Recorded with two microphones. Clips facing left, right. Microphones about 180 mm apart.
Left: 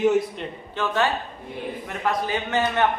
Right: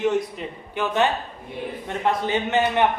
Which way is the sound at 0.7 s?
20° right (ahead or behind).